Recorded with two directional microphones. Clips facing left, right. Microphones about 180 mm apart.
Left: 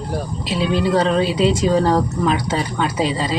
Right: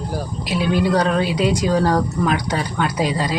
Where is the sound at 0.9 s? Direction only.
Centre (ahead or behind).